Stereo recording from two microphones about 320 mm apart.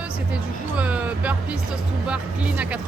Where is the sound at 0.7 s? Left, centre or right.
Centre.